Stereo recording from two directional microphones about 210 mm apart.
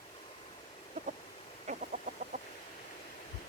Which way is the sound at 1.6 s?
40° right (ahead or behind).